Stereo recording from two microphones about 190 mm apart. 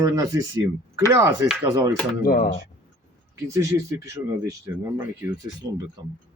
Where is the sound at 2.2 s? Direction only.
50° left (ahead or behind).